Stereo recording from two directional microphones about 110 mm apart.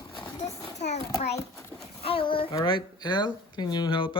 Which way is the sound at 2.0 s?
55° left (ahead or behind).